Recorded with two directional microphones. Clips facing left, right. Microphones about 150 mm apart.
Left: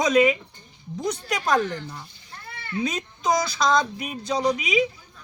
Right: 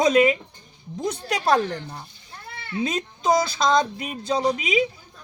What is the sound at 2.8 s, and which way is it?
A man's voice, 25° right (ahead or behind).